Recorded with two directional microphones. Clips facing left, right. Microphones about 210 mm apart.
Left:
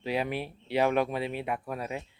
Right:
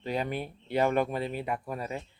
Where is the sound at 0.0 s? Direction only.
5° left (ahead or behind).